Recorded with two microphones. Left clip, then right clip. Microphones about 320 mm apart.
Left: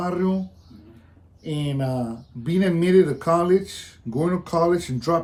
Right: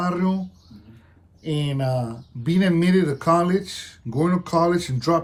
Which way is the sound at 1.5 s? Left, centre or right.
Right.